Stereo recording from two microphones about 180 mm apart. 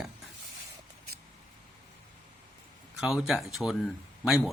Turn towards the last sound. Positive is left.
turn(degrees=0)  # may be behind; listen again after turning